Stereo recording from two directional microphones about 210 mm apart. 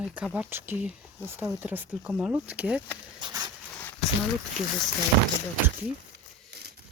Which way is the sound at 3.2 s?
20° right (ahead or behind).